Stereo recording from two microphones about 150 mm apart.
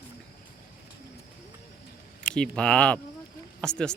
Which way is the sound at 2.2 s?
5° left (ahead or behind).